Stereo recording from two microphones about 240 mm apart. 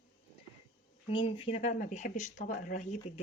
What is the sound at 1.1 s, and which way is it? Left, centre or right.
Speech, left.